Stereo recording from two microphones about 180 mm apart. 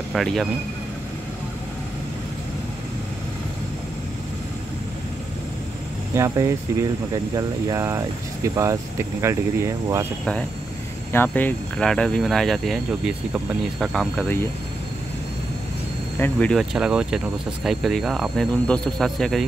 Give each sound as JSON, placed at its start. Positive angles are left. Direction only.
{"t": 0.1, "sound": "speech", "side_deg": 0}
{"t": 6.1, "sound": "speech", "side_deg": -15}
{"t": 11.2, "sound": "speech", "side_deg": 5}
{"t": 16.2, "sound": "speech", "side_deg": 5}